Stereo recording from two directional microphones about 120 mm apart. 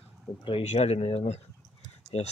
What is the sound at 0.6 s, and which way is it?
Speech, 65° left (ahead or behind).